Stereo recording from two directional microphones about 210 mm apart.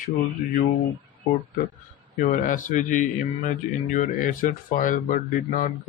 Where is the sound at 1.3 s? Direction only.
35° left (ahead or behind).